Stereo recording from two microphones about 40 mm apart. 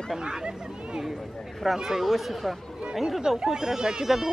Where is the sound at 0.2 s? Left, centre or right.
Centre.